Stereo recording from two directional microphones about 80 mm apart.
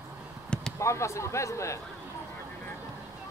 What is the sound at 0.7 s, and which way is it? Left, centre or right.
Speech, left.